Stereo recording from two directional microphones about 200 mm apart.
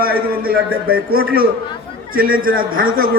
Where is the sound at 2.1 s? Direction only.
45° right (ahead or behind).